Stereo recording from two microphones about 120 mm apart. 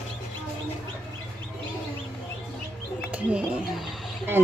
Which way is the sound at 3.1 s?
10° right (ahead or behind).